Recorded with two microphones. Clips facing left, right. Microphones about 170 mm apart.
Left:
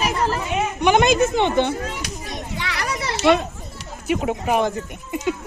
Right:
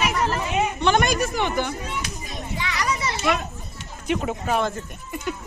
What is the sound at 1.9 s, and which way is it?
Children playing, 75° left (ahead or behind).